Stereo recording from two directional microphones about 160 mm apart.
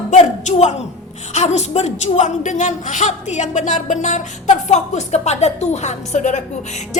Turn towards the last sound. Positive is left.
turn(degrees=45)  # may be behind; listen again after turning